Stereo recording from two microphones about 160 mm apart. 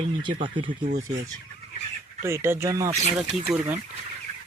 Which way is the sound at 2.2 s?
15° right (ahead or behind).